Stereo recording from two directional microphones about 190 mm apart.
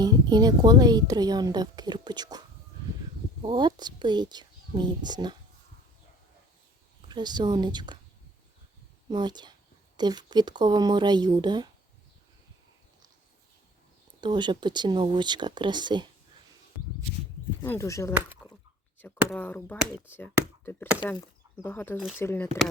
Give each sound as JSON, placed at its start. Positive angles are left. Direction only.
{"t": 0.0, "sound": "speech", "side_deg": -20}
{"t": 3.4, "sound": "a woman's voice", "side_deg": -25}
{"t": 7.1, "sound": "speech", "side_deg": -20}
{"t": 9.0, "sound": "speech", "side_deg": -20}
{"t": 14.2, "sound": "speech", "side_deg": -25}
{"t": 17.6, "sound": "speech", "side_deg": 15}